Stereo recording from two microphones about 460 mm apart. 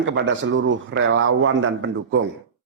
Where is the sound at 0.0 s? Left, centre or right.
Right.